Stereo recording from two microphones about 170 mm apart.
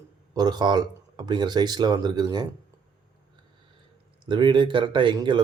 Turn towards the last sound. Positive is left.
turn(degrees=-25)  # may be behind; listen again after turning